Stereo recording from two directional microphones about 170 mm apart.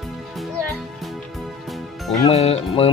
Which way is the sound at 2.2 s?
35° left (ahead or behind).